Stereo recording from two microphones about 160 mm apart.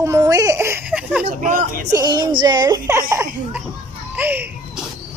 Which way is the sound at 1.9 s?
25° right (ahead or behind).